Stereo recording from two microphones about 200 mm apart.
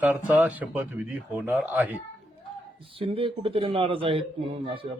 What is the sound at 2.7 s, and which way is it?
Speech, 25° right (ahead or behind).